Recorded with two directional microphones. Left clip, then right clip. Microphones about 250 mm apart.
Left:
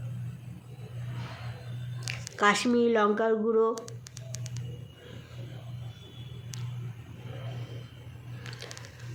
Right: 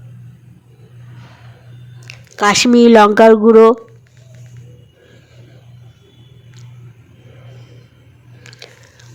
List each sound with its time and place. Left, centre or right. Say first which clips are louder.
2.3 s speech: right 13 dB; right